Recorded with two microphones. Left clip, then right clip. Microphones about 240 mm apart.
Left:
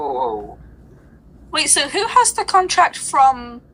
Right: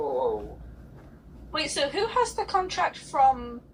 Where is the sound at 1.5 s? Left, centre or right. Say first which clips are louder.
Left 9 dB; left.